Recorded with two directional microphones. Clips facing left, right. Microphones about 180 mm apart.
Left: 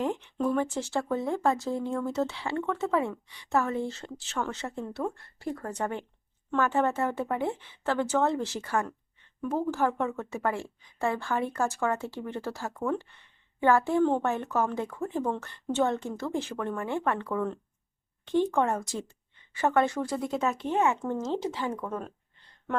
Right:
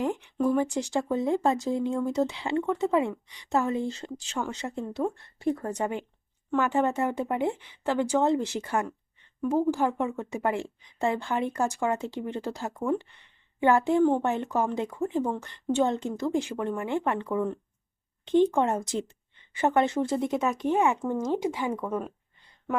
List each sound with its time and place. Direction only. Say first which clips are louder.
0.0 s speech: right 2 dB; 10° right (ahead or behind)